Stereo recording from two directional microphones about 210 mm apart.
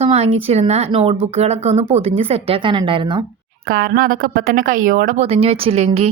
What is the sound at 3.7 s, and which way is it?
Speech, 45° right (ahead or behind).